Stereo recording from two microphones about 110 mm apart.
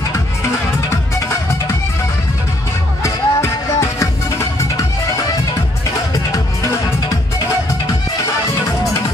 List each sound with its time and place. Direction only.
3.0 s music: 25° left (ahead or behind)